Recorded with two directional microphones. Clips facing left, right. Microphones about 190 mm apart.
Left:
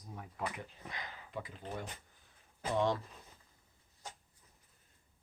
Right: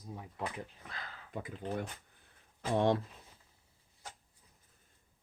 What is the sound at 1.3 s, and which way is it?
Speech, 55° right (ahead or behind).